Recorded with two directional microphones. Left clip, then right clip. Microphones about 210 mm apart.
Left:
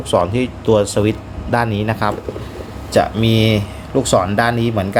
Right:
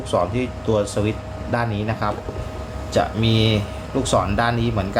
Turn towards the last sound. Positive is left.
turn(degrees=35)  # may be behind; listen again after turning